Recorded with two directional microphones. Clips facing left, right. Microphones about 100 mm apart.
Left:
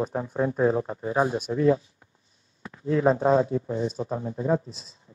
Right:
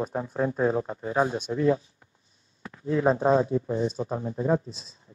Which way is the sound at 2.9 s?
5° right (ahead or behind).